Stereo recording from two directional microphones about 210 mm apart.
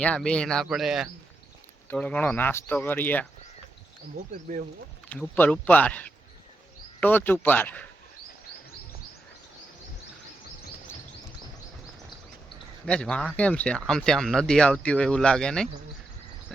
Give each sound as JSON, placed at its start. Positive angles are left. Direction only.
{"t": 0.0, "sound": "speech", "side_deg": 5}
{"t": 4.5, "sound": "speech", "side_deg": -40}
{"t": 5.0, "sound": "speech", "side_deg": 5}
{"t": 12.8, "sound": "speech", "side_deg": 5}